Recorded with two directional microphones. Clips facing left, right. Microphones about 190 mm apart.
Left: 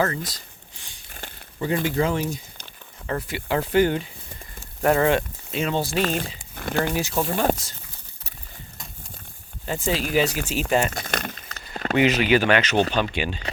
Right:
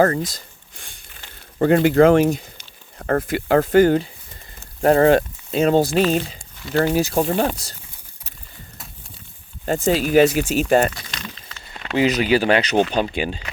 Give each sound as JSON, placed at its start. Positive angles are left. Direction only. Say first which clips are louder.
{"t": 0.0, "sound": "a sound", "louder": "right 7 dB", "side_deg": -45}
{"t": 1.5, "sound": "speech", "louder": "right 9 dB", "side_deg": -60}
{"t": 3.1, "sound": "speech", "louder": "right 8 dB", "side_deg": -50}
{"t": 6.6, "sound": "speech", "louder": "right 4 dB", "side_deg": 55}
{"t": 6.8, "sound": "speech", "louder": "right 6 dB", "side_deg": -45}
{"t": 9.6, "sound": "speech", "louder": "right 6 dB", "side_deg": -45}
{"t": 10.9, "sound": "a sound", "louder": "left 6 dB", "side_deg": 50}
{"t": 11.9, "sound": "speech", "louder": "right 2 dB", "side_deg": -35}